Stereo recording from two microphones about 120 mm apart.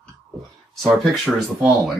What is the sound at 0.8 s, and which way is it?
Speech, centre (ahead or behind).